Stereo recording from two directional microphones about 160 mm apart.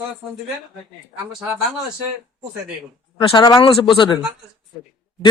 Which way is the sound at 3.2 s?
25° left (ahead or behind).